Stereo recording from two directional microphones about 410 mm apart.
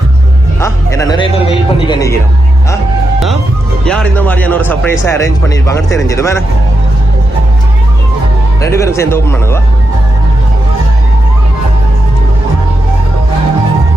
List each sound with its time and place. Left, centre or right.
0.6 s a man's voice: centre
3.8 s speech: centre
8.6 s speech: centre